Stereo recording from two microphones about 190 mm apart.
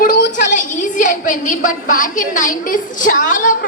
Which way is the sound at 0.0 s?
50° left (ahead or behind).